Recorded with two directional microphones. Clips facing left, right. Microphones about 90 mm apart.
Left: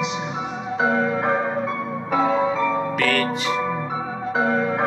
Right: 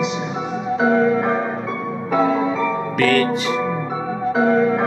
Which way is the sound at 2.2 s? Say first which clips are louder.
Left 1 dB; 30° left (ahead or behind).